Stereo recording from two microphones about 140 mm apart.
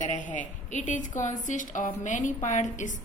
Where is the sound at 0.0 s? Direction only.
65° left (ahead or behind).